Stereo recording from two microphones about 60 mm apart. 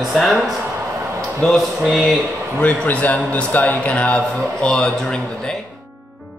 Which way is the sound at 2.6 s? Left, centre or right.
Left.